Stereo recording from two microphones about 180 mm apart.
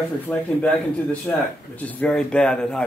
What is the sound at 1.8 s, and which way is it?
Speech, 10° left (ahead or behind).